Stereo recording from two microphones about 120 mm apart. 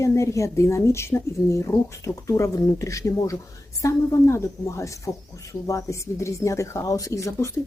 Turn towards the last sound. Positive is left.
turn(degrees=25)  # may be behind; listen again after turning